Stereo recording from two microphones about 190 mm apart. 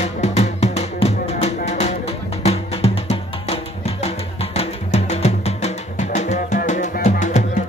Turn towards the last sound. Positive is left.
turn(degrees=40)  # may be behind; listen again after turning